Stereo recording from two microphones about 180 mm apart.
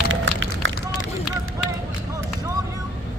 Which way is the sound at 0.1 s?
90° right.